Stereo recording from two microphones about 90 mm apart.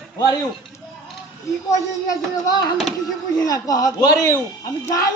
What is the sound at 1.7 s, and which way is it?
A man's voice, 40° left (ahead or behind).